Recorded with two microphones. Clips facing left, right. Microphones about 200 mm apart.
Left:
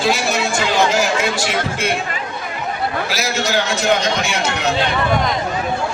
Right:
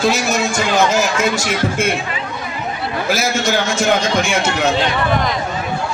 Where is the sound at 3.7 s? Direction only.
50° right (ahead or behind).